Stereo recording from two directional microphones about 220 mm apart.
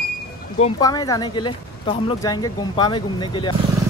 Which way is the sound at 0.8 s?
15° left (ahead or behind).